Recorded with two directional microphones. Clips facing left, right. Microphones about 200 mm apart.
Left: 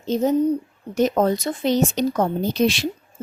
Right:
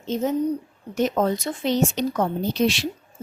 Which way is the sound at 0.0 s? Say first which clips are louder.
Left 4 dB; 35° left (ahead or behind).